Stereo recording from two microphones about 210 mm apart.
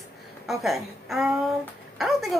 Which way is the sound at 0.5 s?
Centre (ahead or behind).